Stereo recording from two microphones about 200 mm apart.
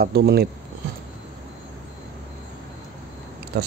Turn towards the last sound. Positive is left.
turn(degrees=-55)  # may be behind; listen again after turning